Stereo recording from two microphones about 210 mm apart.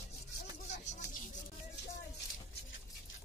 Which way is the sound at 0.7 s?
35° left (ahead or behind).